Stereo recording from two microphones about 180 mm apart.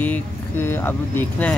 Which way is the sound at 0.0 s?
10° left (ahead or behind).